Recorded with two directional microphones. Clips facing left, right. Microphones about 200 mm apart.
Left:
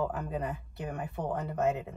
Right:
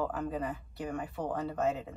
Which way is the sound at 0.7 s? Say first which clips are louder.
Right 1 dB; 20° left (ahead or behind).